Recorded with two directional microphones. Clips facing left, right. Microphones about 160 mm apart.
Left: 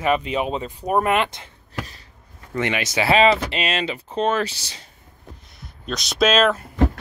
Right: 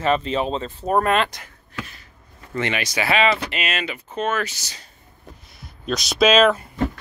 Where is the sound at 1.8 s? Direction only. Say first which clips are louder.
Even; 35° left (ahead or behind).